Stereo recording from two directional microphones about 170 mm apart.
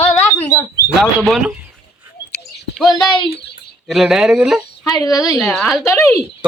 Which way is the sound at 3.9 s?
Centre (ahead or behind).